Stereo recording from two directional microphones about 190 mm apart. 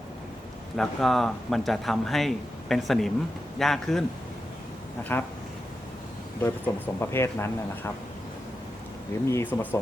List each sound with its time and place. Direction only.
0.8 s speech: centre (ahead or behind)
5.1 s speech: 10° left (ahead or behind)
6.7 s speech: 20° left (ahead or behind)
9.3 s speech: 10° left (ahead or behind)